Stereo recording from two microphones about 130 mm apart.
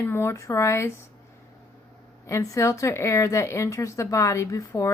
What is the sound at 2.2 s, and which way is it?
Speech, 25° left (ahead or behind).